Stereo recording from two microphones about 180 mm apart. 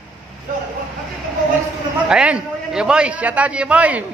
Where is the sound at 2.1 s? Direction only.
5° right (ahead or behind).